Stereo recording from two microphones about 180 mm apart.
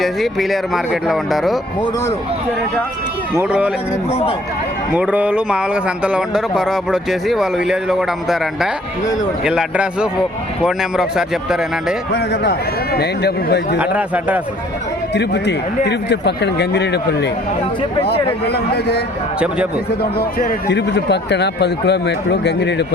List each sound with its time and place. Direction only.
0.0 s a man's voice: centre (ahead or behind)
3.3 s a man's voice: 10° right (ahead or behind)
4.9 s a man's voice: 5° right (ahead or behind)
12.1 s a man's voice: 65° left (ahead or behind)
13.7 s a man's voice: 10° right (ahead or behind)
15.1 s speech: 70° left (ahead or behind)
18.4 s a man's voice: 65° left (ahead or behind)